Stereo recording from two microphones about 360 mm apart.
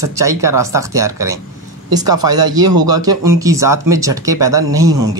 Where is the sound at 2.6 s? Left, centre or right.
Right.